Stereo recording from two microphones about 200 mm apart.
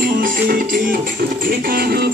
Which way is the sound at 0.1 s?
45° right (ahead or behind).